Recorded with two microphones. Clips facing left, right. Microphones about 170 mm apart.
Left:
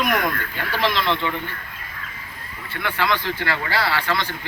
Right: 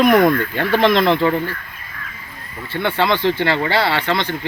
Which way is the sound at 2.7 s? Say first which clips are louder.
Right 5 dB; 30° right (ahead or behind).